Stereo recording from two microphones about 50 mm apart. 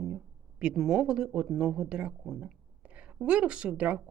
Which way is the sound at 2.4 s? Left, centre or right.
Right.